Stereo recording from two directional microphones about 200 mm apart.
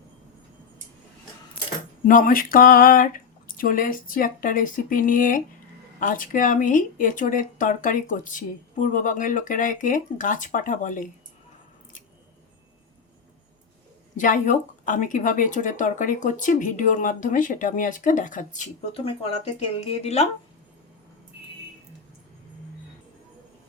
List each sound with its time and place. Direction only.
2.0 s speech: 40° left (ahead or behind)
14.2 s speech: 40° left (ahead or behind)